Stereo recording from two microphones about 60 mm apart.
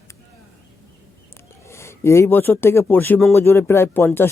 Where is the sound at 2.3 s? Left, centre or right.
Left.